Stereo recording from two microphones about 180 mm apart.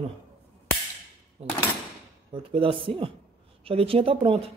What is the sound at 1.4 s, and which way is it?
Speech, 35° right (ahead or behind).